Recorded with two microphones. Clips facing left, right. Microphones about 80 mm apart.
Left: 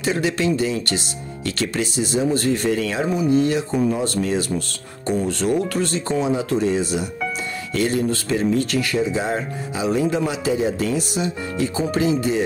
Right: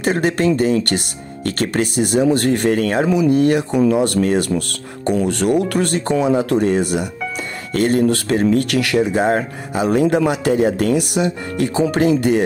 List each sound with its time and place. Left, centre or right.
0.0 s speech: right